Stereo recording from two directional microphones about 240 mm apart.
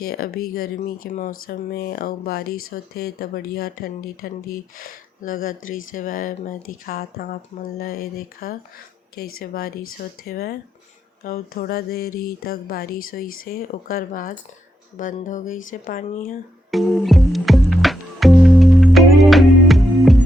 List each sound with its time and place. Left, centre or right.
0.0 s speech: left
16.7 s music: centre